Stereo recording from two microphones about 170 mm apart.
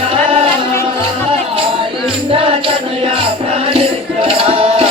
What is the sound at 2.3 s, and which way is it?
Music, 35° right (ahead or behind).